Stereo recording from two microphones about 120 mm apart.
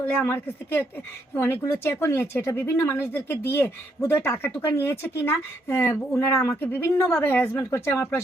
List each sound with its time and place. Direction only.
0.0 s a woman's voice: 15° left (ahead or behind)